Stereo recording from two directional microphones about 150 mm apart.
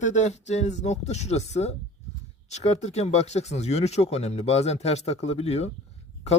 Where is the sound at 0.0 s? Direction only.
50° left (ahead or behind).